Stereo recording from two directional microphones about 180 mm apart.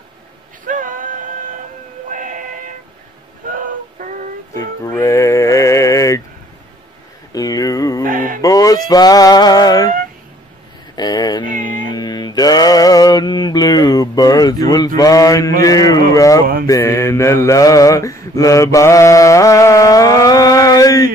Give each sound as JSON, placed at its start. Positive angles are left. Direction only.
{"t": 0.7, "sound": "music", "side_deg": -50}
{"t": 2.0, "sound": "a sound", "side_deg": -45}
{"t": 3.4, "sound": "music", "side_deg": -45}
{"t": 4.6, "sound": "music", "side_deg": 15}
{"t": 7.3, "sound": "a sound", "side_deg": 20}
{"t": 8.0, "sound": "mantra", "side_deg": -50}
{"t": 8.4, "sound": "fowl", "side_deg": 20}
{"t": 11.0, "sound": "cat", "side_deg": 20}
{"t": 11.4, "sound": "cat", "side_deg": -50}
{"t": 11.9, "sound": "mantra", "side_deg": 20}
{"t": 15.0, "sound": "speech", "side_deg": 20}
{"t": 16.6, "sound": "mantra", "side_deg": 15}